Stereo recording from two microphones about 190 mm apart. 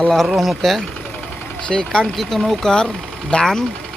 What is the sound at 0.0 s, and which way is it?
Speech, centre (ahead or behind).